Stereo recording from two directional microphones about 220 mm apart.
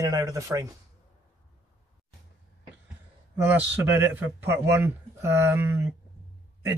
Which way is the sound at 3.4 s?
10° right (ahead or behind).